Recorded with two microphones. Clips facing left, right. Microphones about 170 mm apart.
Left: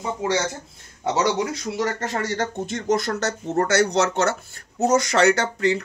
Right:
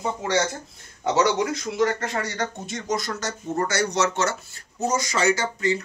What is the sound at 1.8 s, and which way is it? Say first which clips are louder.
Speech: right 2 dB; 40° left (ahead or behind).